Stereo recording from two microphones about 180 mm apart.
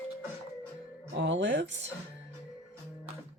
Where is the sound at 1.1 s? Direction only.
85° right.